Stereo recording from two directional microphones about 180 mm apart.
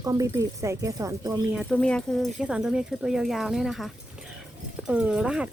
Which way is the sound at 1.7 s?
5° left (ahead or behind).